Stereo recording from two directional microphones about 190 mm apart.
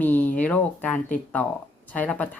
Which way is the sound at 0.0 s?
10° left (ahead or behind).